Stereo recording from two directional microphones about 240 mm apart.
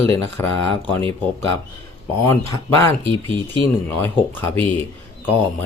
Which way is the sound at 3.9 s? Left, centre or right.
Centre.